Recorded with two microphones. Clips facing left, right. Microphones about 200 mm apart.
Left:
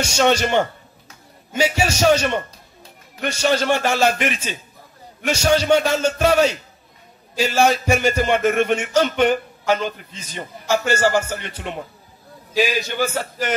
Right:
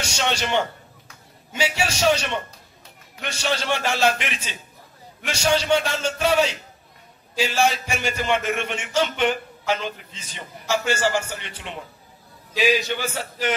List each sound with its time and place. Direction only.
0.0 s a man's voice: 45° left (ahead or behind)